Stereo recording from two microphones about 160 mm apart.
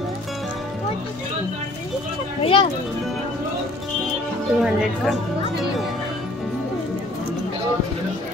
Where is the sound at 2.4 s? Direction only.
35° left (ahead or behind).